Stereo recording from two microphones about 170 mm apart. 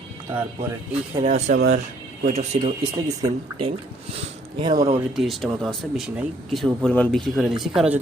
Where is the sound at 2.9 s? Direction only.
25° right (ahead or behind).